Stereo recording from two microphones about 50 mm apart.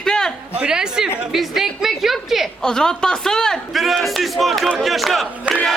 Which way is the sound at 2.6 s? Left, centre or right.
Centre.